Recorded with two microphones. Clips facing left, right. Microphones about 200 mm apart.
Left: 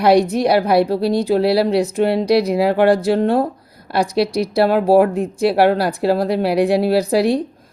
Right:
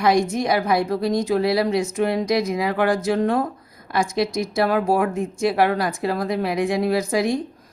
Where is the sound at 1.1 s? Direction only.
30° left (ahead or behind).